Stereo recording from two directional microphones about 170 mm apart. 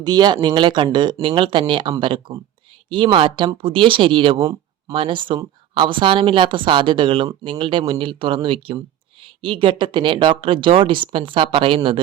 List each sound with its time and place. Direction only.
0.0 s speech: 25° right (ahead or behind)